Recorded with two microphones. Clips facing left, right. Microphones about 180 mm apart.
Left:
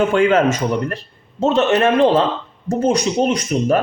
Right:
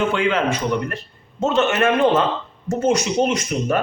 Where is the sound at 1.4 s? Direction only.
30° left (ahead or behind).